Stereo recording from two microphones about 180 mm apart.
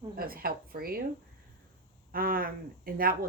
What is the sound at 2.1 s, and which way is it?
Speech, 55° right (ahead or behind).